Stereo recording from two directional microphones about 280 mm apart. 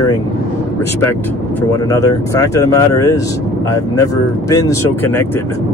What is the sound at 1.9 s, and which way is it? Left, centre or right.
Speech, centre.